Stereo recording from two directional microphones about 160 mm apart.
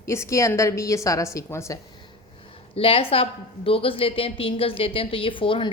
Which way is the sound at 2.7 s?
35° left (ahead or behind).